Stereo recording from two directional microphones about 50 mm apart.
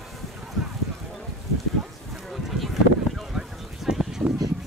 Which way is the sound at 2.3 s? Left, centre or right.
Centre.